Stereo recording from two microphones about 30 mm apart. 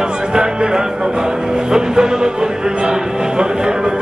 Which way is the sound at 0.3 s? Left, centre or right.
Right.